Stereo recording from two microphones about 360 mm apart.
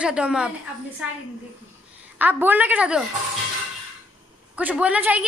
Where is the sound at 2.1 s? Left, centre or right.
Centre.